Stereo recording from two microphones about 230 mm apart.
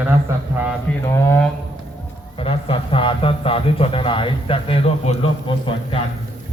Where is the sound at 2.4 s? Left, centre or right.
Left.